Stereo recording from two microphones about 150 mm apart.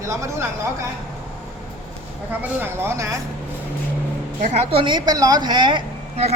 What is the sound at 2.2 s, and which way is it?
Speech, 15° right (ahead or behind).